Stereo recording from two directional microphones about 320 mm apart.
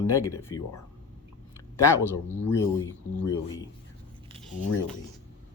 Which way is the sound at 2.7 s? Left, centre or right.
Centre.